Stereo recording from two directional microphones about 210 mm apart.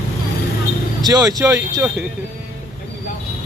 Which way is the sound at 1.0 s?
20° right (ahead or behind).